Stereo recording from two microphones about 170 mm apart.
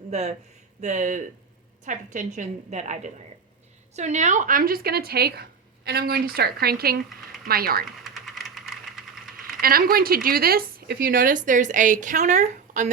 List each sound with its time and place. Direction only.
0.1 s a woman's voice: 40° right (ahead or behind); by 7.9 s 60° right (ahead or behind)
8.0 s vehicle: centre (ahead or behind)
9.4 s speech: 60° right (ahead or behind)